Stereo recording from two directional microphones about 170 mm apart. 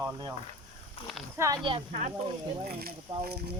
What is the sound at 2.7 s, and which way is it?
Speech, 65° right (ahead or behind).